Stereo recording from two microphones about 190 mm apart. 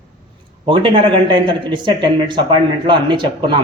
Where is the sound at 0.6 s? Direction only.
25° right (ahead or behind).